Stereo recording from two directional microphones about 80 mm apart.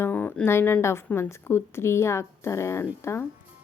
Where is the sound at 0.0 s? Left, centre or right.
Left.